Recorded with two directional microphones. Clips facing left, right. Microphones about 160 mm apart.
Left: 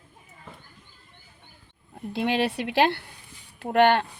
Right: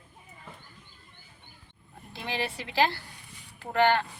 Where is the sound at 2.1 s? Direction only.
70° left (ahead or behind).